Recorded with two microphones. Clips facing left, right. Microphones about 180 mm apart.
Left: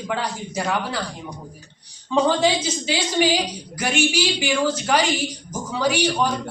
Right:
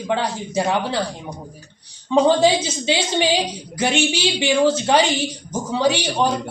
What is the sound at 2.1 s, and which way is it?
A woman's voice, 20° right (ahead or behind).